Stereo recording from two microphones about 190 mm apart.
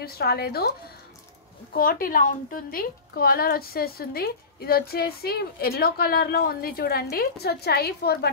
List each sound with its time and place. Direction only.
0.0 s speech: 55° left (ahead or behind)
1.7 s a woman's voice: 50° left (ahead or behind)